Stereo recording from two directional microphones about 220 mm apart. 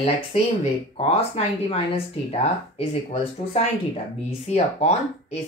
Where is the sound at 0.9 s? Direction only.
25° left (ahead or behind).